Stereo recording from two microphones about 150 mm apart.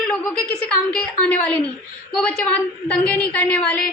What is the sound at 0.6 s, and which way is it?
A woman's voice, 10° left (ahead or behind).